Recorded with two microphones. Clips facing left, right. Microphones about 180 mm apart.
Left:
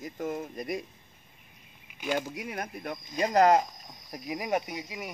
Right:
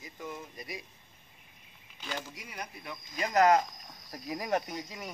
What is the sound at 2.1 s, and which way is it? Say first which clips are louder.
Speech: left 8 dB; 55° left (ahead or behind).